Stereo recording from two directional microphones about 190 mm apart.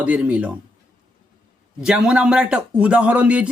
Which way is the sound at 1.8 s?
5° right (ahead or behind).